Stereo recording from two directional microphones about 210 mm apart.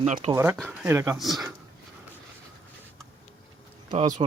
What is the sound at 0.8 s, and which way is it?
Speech, 10° right (ahead or behind).